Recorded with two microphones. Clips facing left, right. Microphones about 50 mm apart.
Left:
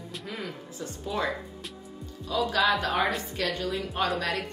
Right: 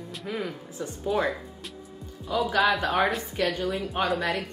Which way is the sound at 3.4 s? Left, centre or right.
Right.